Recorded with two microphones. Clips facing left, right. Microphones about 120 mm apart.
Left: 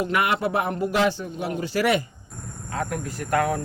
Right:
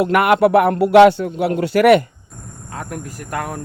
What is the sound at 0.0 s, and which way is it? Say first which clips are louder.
Speech: right 10 dB; 60° right (ahead or behind).